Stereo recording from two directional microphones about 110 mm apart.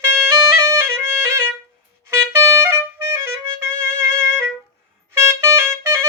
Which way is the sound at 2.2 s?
25° right (ahead or behind).